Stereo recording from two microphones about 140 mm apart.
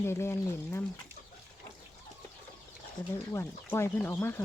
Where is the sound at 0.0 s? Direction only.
20° left (ahead or behind).